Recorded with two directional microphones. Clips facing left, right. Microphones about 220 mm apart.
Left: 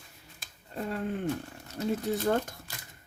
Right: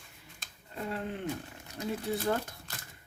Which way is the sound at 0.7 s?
45° left (ahead or behind).